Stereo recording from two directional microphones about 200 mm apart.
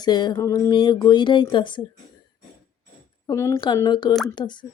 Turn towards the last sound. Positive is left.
turn(degrees=20)  # may be behind; listen again after turning